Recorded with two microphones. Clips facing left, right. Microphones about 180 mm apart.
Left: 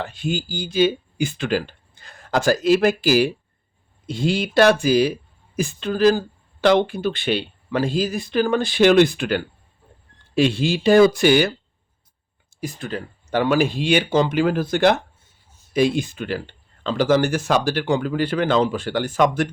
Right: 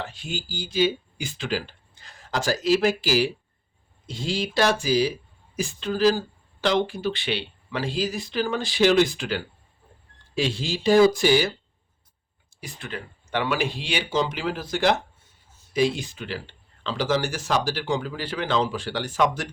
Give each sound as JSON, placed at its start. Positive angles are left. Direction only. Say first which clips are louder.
{"t": 0.0, "sound": "speech", "louder": "left 8 dB", "side_deg": 55}
{"t": 12.5, "sound": "speech", "louder": "left 7 dB", "side_deg": 45}